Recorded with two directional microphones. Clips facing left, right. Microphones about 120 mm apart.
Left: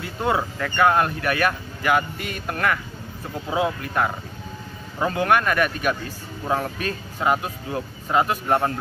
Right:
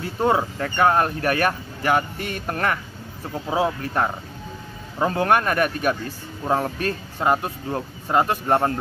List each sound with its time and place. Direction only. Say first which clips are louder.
0.0 s speech: right 3 dB; 35° right (ahead or behind)